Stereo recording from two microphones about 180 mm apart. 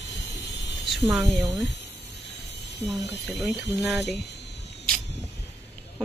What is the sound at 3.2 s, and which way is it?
Speech, centre (ahead or behind).